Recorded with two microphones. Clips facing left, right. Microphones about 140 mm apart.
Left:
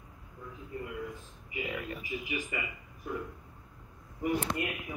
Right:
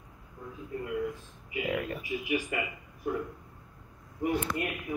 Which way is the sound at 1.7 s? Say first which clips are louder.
Right 8 dB; 45° right (ahead or behind).